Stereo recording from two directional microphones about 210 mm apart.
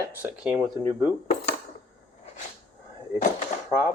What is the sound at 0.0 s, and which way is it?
Speech, 10° right (ahead or behind).